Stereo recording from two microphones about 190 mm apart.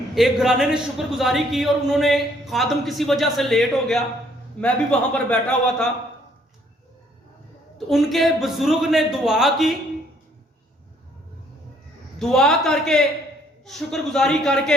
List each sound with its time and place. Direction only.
0.1 s a man's voice: centre (ahead or behind)
7.9 s a man's voice: centre (ahead or behind)
12.2 s a man's voice: centre (ahead or behind)